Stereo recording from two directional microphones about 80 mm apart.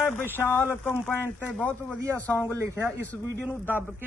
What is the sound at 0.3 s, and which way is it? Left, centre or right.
Speech, left.